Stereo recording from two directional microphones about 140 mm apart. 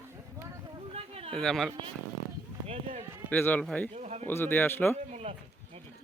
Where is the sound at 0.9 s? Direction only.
45° right (ahead or behind).